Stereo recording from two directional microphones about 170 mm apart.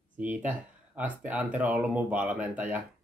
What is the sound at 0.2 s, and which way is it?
Speech, 10° right (ahead or behind).